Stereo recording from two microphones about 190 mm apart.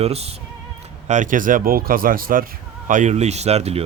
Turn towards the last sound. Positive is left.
turn(degrees=-35)  # may be behind; listen again after turning